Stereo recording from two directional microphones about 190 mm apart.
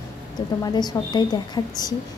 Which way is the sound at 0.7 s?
20° left (ahead or behind).